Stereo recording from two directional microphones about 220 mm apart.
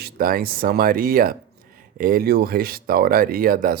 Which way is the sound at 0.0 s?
40° right (ahead or behind).